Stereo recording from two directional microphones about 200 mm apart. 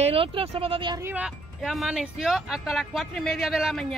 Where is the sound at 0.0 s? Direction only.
30° right (ahead or behind).